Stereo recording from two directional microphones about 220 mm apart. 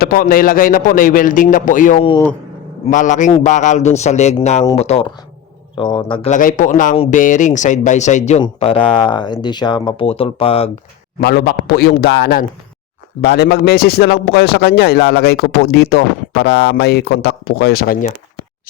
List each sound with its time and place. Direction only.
0.0 s a man's voice: 40° left (ahead or behind); by 6.3 s 20° left (ahead or behind)
6.3 s speech: 35° left (ahead or behind)
11.2 s speech: 45° left (ahead or behind)